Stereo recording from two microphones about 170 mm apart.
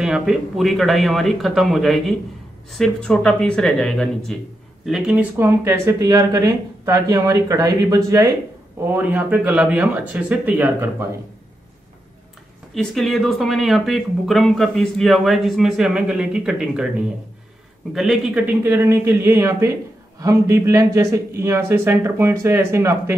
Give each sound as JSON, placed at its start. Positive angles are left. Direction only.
{"t": 0.0, "sound": "a man's voice", "side_deg": -5}
{"t": 12.7, "sound": "speech", "side_deg": 0}
{"t": 17.9, "sound": "a man's voice", "side_deg": 0}